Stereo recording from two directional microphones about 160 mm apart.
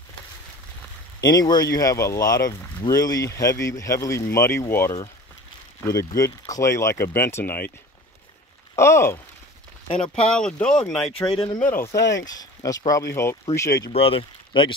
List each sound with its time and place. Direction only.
1.2 s speech: 25° left (ahead or behind)
8.7 s speech: 15° left (ahead or behind)
10.3 s speech: 5° left (ahead or behind)
11.3 s speech: 35° left (ahead or behind)
11.6 s speech: 15° left (ahead or behind)
13.8 s speech: 35° left (ahead or behind)